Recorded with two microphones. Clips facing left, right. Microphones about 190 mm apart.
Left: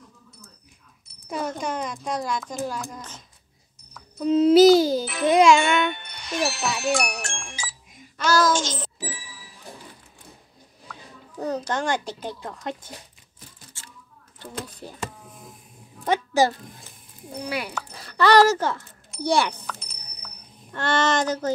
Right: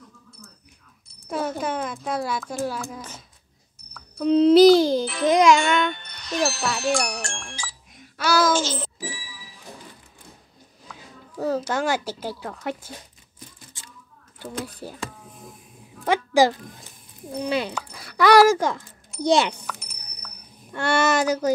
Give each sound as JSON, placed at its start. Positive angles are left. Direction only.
{"t": 1.3, "sound": "speech", "side_deg": -5}
{"t": 4.2, "sound": "a child's voice", "side_deg": 5}
{"t": 6.1, "sound": "music", "side_deg": 10}
{"t": 8.2, "sound": "a child's voice", "side_deg": -10}
{"t": 10.9, "sound": "speech", "side_deg": -5}
{"t": 13.8, "sound": "a sound", "side_deg": -15}
{"t": 14.4, "sound": "speech", "side_deg": -10}
{"t": 16.1, "sound": "speech", "side_deg": -15}
{"t": 17.4, "sound": "speech", "side_deg": -25}
{"t": 17.7, "sound": "speech", "side_deg": -10}
{"t": 20.7, "sound": "speech", "side_deg": -10}